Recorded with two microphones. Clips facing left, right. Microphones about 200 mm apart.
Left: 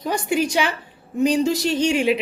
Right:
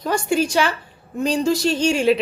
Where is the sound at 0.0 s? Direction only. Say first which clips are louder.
Right 1 dB; 15° left (ahead or behind).